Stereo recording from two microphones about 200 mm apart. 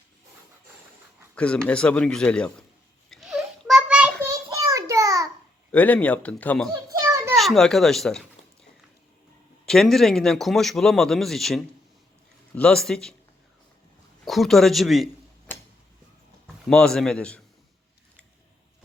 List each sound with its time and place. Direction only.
1.4 s a man's voice: 5° left (ahead or behind)
3.1 s a sound: centre (ahead or behind)
4.4 s a sound: 15° right (ahead or behind)
5.7 s speech: 5° left (ahead or behind)
7.0 s children playing: 15° right (ahead or behind)
7.3 s a man's voice: centre (ahead or behind)
9.6 s a man's voice: centre (ahead or behind)
14.3 s a man's voice: centre (ahead or behind)
16.6 s a man's voice: 5° left (ahead or behind)